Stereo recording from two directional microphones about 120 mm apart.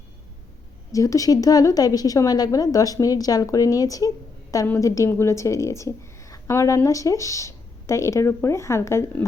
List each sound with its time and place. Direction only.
0.9 s a woman's voice: 30° left (ahead or behind)